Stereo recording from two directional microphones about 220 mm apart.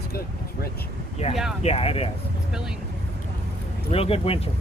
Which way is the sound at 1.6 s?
25° left (ahead or behind).